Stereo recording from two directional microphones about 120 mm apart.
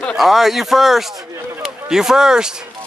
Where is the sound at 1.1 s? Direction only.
25° right (ahead or behind).